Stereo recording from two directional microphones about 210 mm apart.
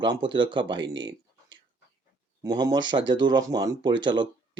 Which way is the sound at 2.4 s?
20° right (ahead or behind).